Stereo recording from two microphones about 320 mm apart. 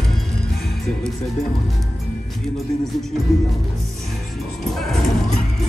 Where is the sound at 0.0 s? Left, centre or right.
Centre.